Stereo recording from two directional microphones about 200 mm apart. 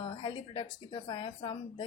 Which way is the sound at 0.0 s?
25° left (ahead or behind).